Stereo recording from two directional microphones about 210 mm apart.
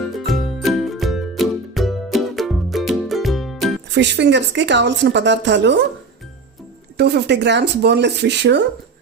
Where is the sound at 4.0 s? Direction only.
55° right (ahead or behind).